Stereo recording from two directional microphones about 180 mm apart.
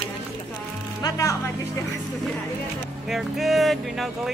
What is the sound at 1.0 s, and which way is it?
Speech, 20° left (ahead or behind).